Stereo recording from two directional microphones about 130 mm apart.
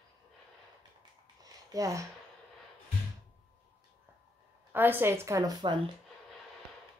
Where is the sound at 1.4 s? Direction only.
25° right (ahead or behind).